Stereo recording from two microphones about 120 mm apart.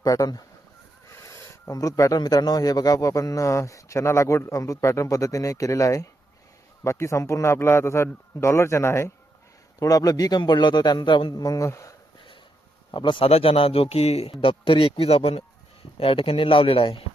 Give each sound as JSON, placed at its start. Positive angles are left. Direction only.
{"t": 0.0, "sound": "a man's voice", "side_deg": 30}
{"t": 12.9, "sound": "speech", "side_deg": 40}